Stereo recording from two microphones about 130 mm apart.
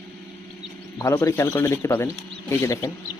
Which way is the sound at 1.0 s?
25° left (ahead or behind).